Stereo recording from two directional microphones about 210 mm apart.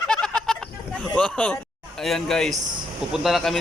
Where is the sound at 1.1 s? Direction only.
5° left (ahead or behind).